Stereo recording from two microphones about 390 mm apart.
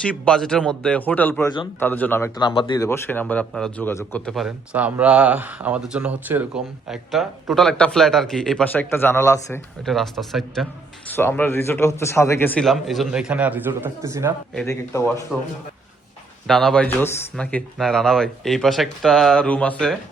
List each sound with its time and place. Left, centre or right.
0.0 s speech: centre
16.5 s speech: centre